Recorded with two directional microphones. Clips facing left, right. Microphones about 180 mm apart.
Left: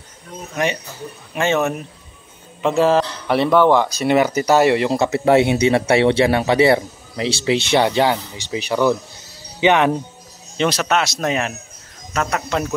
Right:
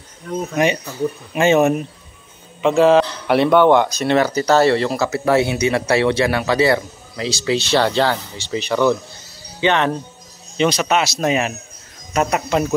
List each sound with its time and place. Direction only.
1.3 s speech: 15° right (ahead or behind)
2.6 s a man's voice: centre (ahead or behind)
4.9 s speech: 25° left (ahead or behind)
10.6 s a man's voice: centre (ahead or behind)